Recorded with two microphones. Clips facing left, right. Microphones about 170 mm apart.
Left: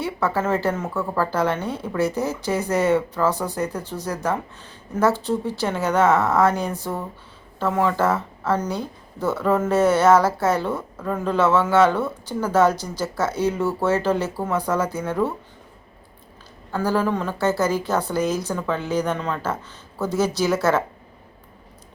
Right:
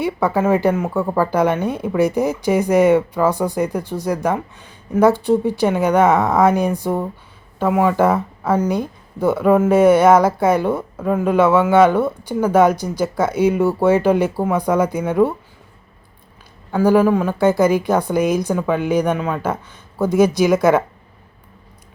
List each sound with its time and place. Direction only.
0.0 s speech: 15° right (ahead or behind)
16.7 s speech: 10° right (ahead or behind)